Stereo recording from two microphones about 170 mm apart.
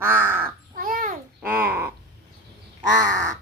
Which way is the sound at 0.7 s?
60° right (ahead or behind).